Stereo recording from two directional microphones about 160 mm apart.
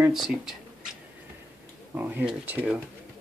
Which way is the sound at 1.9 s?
10° right (ahead or behind).